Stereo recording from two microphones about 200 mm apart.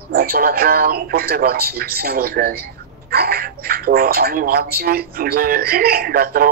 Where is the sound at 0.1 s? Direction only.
50° right (ahead or behind).